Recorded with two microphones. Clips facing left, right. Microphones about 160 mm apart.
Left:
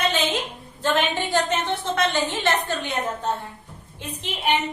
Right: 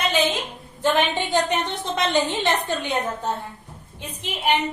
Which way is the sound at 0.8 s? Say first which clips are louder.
Right 2 dB; 15° right (ahead or behind).